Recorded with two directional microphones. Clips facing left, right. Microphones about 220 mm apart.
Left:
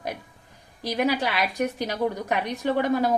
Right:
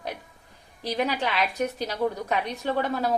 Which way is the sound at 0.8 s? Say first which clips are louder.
Left 3 dB; 10° left (ahead or behind).